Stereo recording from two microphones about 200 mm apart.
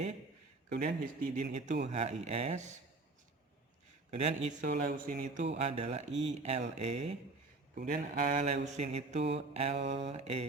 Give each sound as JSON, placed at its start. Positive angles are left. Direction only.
{"t": 0.9, "sound": "speech", "side_deg": -50}
{"t": 1.5, "sound": "mantra", "side_deg": -35}
{"t": 4.1, "sound": "mantra", "side_deg": -30}
{"t": 4.7, "sound": "mantra", "side_deg": -45}
{"t": 7.8, "sound": "mantra", "side_deg": -45}